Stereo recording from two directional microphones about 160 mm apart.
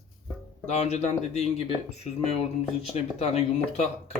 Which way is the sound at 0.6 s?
45° left (ahead or behind).